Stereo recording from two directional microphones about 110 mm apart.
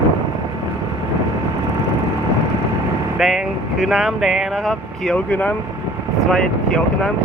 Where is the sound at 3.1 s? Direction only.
5° right (ahead or behind).